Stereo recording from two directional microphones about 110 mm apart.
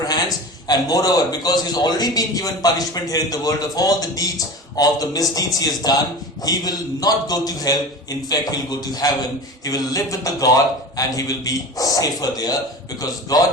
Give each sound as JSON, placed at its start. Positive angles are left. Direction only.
{"t": 0.0, "sound": "a man's voice", "side_deg": 35}